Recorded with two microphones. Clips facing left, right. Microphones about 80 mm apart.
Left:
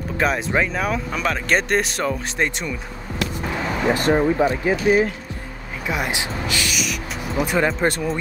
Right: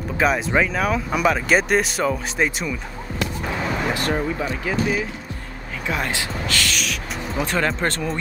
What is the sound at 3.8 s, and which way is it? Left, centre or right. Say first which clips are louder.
Speech: left 9 dB; left.